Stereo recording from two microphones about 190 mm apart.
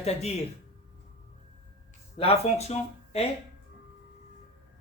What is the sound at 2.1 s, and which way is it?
Speech, 30° left (ahead or behind).